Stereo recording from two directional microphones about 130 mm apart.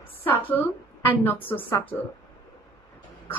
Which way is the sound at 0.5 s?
15° left (ahead or behind).